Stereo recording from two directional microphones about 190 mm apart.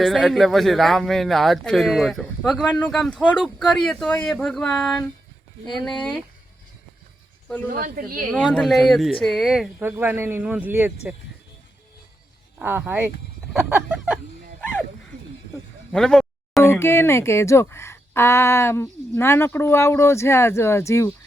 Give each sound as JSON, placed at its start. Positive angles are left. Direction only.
{"t": 0.0, "sound": "speech", "side_deg": 0}
{"t": 7.7, "sound": "speech", "side_deg": -45}
{"t": 8.3, "sound": "speech", "side_deg": 0}
{"t": 12.5, "sound": "speech", "side_deg": -10}
{"t": 13.6, "sound": "a sound", "side_deg": -10}
{"t": 15.9, "sound": "speech", "side_deg": 5}